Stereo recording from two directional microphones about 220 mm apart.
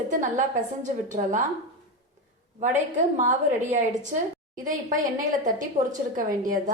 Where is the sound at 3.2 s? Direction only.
35° right (ahead or behind).